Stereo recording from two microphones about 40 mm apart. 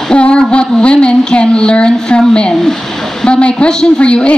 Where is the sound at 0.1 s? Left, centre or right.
Left.